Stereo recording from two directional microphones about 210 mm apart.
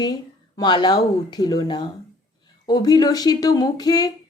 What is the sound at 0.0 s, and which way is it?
Speech, 20° left (ahead or behind).